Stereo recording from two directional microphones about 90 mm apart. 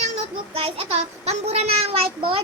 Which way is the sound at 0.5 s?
90° right.